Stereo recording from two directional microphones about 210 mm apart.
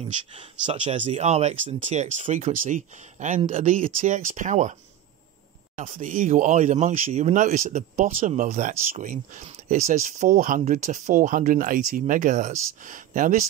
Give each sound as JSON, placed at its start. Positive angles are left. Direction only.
{"t": 0.4, "sound": "speech", "side_deg": -25}
{"t": 5.8, "sound": "speech", "side_deg": -40}